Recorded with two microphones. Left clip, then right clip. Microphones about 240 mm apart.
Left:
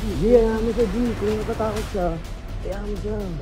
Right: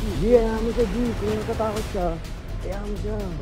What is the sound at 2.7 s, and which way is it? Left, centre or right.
Speech, centre.